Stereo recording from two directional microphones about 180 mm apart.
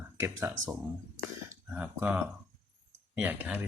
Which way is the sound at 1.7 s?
5° right (ahead or behind).